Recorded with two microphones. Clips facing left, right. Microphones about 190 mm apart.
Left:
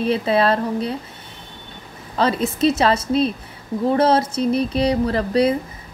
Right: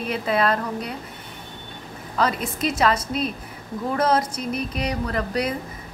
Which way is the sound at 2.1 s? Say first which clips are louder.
Left 5 dB; 30° left (ahead or behind).